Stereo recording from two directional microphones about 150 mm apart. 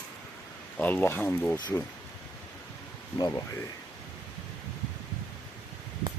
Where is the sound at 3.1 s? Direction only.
30° left (ahead or behind).